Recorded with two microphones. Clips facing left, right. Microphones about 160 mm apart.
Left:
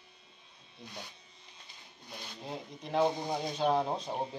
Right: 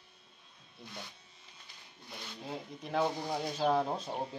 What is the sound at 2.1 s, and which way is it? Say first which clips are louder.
Speech: even; 15° left (ahead or behind).